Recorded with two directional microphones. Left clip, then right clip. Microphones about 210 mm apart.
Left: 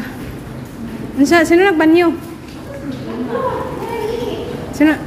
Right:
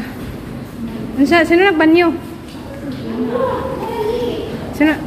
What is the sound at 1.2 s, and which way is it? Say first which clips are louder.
Speech: even; 15° left (ahead or behind).